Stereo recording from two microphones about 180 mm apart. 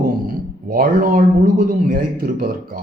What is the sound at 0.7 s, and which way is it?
A man's voice, 50° right (ahead or behind).